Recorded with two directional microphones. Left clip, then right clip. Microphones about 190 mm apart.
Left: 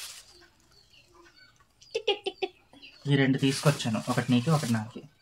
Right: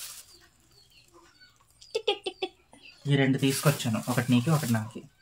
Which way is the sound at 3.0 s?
10° right (ahead or behind).